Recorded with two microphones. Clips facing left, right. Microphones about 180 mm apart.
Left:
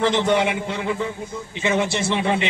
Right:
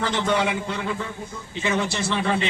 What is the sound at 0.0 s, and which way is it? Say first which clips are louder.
A man's voice: left 4 dB; 25° left (ahead or behind).